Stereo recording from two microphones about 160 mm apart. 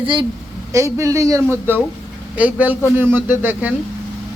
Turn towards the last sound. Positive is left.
turn(degrees=-10)  # may be behind; listen again after turning